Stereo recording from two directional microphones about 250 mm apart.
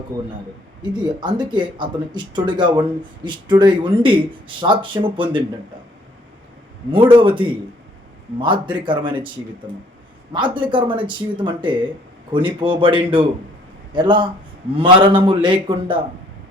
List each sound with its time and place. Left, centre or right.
0.8 s speech: centre
6.9 s speech: right
10.3 s speech: centre